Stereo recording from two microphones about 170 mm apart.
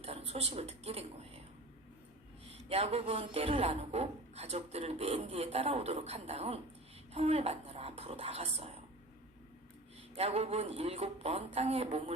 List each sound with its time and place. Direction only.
0.0 s speech: 35° right (ahead or behind)
2.6 s speech: 40° right (ahead or behind)
10.2 s speech: 40° right (ahead or behind)